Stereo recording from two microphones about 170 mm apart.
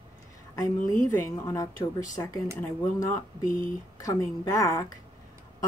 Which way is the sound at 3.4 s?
50° left (ahead or behind).